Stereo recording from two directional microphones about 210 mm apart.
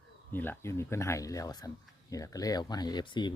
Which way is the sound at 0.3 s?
10° left (ahead or behind).